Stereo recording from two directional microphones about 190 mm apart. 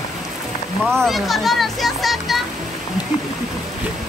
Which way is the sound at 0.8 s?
Centre (ahead or behind).